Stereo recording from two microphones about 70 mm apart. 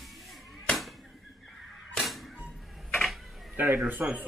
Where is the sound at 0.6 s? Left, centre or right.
Centre.